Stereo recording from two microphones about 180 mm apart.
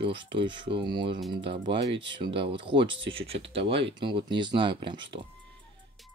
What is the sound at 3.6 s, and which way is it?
Speech, 80° right.